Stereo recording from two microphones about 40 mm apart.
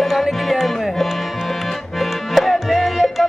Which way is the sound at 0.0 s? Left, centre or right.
Centre.